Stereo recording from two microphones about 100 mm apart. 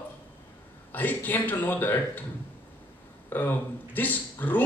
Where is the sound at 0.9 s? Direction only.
20° left (ahead or behind).